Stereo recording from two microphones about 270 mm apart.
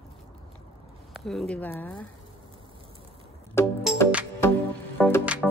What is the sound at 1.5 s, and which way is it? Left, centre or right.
Speech, centre.